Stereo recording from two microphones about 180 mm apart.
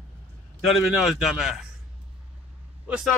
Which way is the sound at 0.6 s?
Centre (ahead or behind).